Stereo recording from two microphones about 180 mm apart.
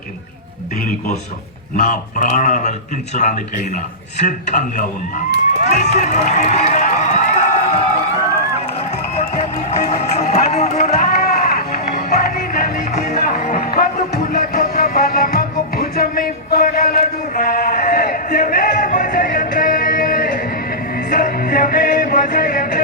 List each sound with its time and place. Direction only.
1.7 s speech: 45° left (ahead or behind)
5.6 s run: 40° left (ahead or behind)
8.9 s run: 35° left (ahead or behind)
10.0 s music: 35° left (ahead or behind)
11.0 s run: 55° left (ahead or behind)
11.8 s music: 40° left (ahead or behind)
12.9 s music: 40° left (ahead or behind)
22.3 s a sound: 50° left (ahead or behind)